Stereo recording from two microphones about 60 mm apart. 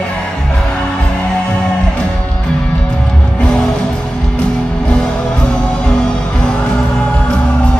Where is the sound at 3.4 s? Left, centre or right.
Centre.